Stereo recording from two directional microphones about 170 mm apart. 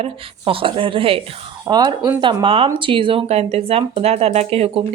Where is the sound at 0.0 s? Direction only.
30° right (ahead or behind).